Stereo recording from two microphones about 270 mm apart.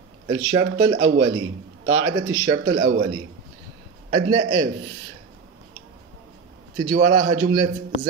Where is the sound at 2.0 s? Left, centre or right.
Centre.